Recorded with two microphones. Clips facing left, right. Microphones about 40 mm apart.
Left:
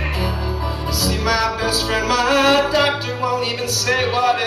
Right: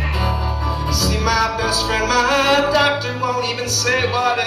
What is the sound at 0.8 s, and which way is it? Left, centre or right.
Music, centre.